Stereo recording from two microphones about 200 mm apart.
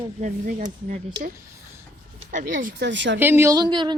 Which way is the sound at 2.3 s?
40° right (ahead or behind).